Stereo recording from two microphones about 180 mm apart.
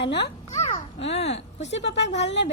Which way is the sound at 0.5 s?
40° left (ahead or behind).